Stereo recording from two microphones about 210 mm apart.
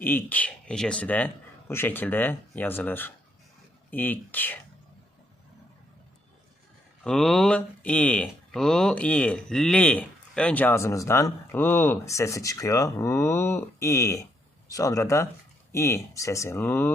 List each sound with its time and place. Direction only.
0.0 s speech: 10° left (ahead or behind)
7.0 s speech: 5° left (ahead or behind)